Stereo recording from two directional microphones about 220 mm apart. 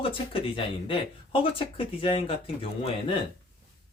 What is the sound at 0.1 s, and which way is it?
Speech, 25° left (ahead or behind).